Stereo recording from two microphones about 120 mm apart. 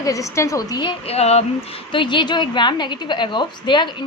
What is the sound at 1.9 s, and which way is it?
A woman's voice, 40° left (ahead or behind).